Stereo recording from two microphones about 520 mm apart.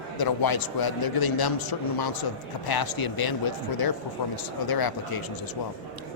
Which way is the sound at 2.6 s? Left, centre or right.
Left.